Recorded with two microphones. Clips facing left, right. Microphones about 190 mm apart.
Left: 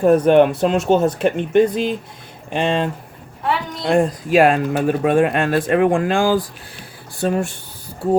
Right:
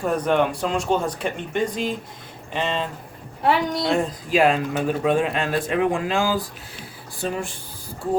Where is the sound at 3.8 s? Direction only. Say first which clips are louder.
Left 6 dB; 55° left (ahead or behind).